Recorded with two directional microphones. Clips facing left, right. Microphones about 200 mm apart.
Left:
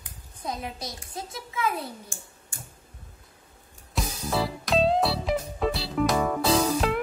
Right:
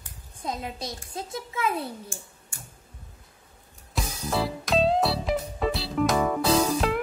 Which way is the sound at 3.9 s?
Centre (ahead or behind).